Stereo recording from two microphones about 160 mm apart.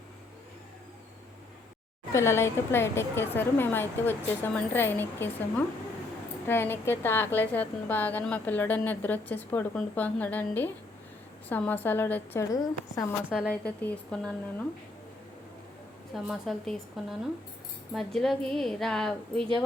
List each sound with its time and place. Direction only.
2.1 s a woman's voice: 15° left (ahead or behind)
13.5 s a woman's voice: 10° left (ahead or behind)
16.1 s speech: centre (ahead or behind)